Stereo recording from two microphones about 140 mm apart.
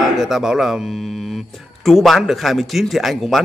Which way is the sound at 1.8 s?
Centre (ahead or behind).